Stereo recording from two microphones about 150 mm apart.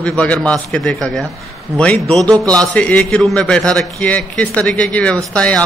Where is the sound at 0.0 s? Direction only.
10° left (ahead or behind).